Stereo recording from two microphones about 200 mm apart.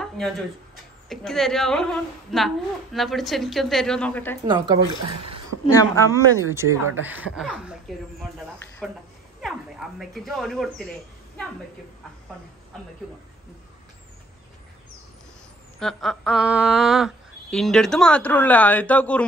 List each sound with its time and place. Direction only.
1.0 s speech: centre (ahead or behind)
4.5 s speech: 20° right (ahead or behind)
5.7 s speech: 15° left (ahead or behind)
6.1 s speech: 15° right (ahead or behind)
8.8 s speech: centre (ahead or behind)
15.8 s speech: centre (ahead or behind)